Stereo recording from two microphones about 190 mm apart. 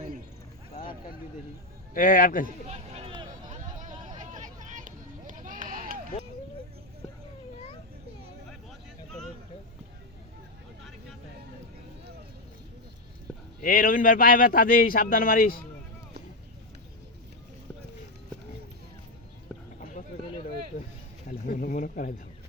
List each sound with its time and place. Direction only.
1.9 s a man's voice: 45° left (ahead or behind)
2.6 s a sound: 35° right (ahead or behind)
3.9 s vehicle: 20° right (ahead or behind)
4.2 s run: 40° right (ahead or behind)
13.6 s a man's voice: 45° left (ahead or behind)
21.2 s a sound: 45° left (ahead or behind)